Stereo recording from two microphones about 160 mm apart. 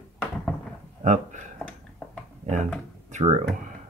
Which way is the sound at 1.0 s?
50° right (ahead or behind).